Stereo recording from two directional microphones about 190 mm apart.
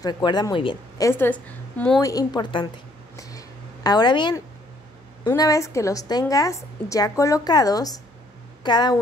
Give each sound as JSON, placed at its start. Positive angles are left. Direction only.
{"t": 0.0, "sound": "a woman's voice", "side_deg": 20}
{"t": 2.0, "sound": "a woman's voice", "side_deg": 20}
{"t": 3.2, "sound": "a sound", "side_deg": 20}
{"t": 5.2, "sound": "a woman's voice", "side_deg": 20}